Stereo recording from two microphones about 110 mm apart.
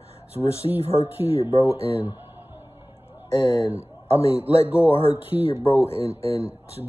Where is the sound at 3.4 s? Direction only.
50° left (ahead or behind).